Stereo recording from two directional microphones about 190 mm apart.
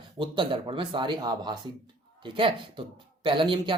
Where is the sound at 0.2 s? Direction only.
25° right (ahead or behind).